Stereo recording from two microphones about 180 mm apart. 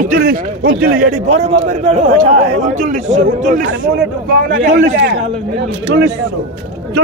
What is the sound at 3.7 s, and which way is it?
A man's voice, 65° right (ahead or behind).